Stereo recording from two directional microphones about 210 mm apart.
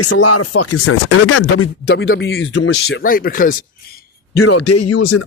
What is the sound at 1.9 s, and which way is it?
Speech, 55° left (ahead or behind).